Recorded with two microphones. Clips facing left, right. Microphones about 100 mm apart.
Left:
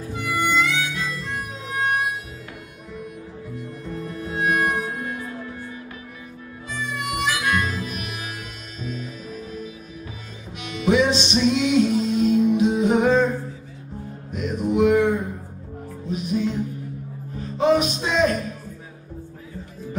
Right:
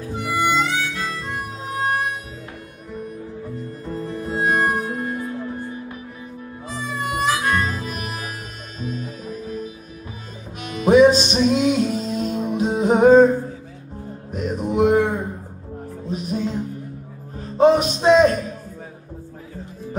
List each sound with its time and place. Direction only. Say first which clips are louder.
0.2 s harmonica: right 2 dB; 35° right (ahead or behind)
3.5 s music: right 1 dB; 35° right (ahead or behind)
6.7 s harmonica: right 2 dB; 35° right (ahead or behind)
8.8 s music: right 3 dB; 45° right (ahead or behind)
14.3 s a sound: even; 40° right (ahead or behind)
16.1 s music: left 1 dB; 40° right (ahead or behind)